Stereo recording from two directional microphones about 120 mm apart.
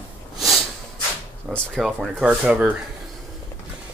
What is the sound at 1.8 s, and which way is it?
Speech, 5° right (ahead or behind).